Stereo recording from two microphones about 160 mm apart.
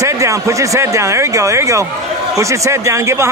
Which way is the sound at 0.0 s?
20° right (ahead or behind).